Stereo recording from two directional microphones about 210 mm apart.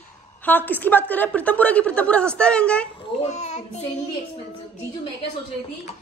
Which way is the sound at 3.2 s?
30° left (ahead or behind).